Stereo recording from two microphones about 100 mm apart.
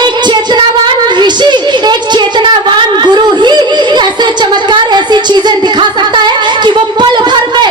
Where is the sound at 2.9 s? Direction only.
45° right (ahead or behind).